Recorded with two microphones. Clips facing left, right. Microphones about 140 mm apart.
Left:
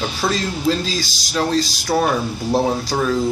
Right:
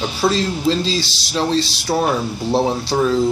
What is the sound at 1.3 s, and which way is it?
Speech, centre (ahead or behind).